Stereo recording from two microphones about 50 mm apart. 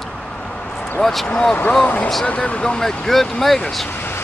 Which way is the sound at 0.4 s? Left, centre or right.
Left.